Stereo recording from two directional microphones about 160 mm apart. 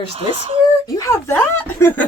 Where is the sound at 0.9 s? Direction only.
15° left (ahead or behind).